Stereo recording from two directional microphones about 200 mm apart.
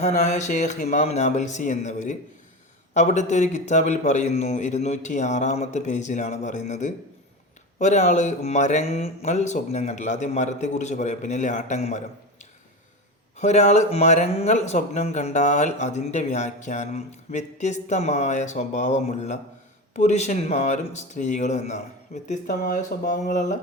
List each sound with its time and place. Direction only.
0.0 s speech: 35° left (ahead or behind)
13.3 s speech: 35° left (ahead or behind)